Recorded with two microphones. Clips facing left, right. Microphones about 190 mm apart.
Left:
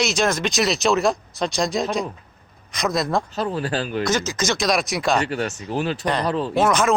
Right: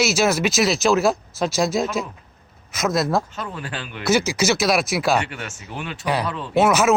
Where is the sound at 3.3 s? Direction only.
35° left (ahead or behind).